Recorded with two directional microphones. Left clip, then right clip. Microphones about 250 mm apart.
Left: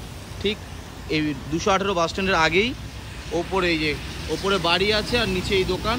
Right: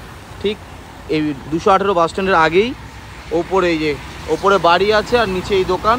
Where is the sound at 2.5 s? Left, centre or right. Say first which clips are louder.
Right 6 dB; centre.